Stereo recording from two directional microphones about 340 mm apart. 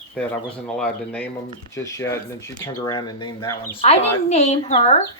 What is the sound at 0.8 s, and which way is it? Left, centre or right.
A woman's voice, centre.